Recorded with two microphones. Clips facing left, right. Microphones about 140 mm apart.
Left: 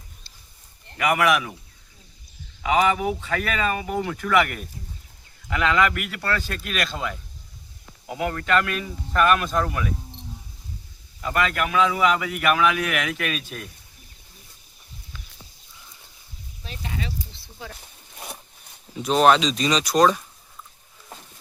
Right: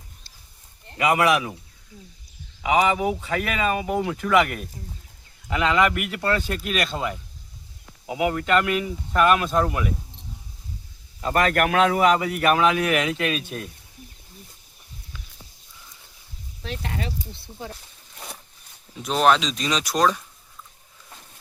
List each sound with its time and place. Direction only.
0.9 s speech: 25° right (ahead or behind)
2.6 s speech: 15° right (ahead or behind)
5.5 s speech: 20° right (ahead or behind)
8.0 s speech: 10° right (ahead or behind)
8.3 s speech: 20° right (ahead or behind)
11.2 s speech: 40° right (ahead or behind)
11.5 s speech: 60° right (ahead or behind)
12.0 s speech: 35° right (ahead or behind)
16.6 s speech: 60° right (ahead or behind)
18.9 s speech: centre (ahead or behind)